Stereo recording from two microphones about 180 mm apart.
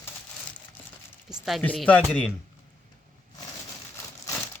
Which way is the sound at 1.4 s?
5° left (ahead or behind).